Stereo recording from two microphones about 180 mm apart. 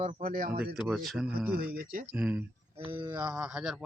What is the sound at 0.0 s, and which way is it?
Speech, 50° right (ahead or behind).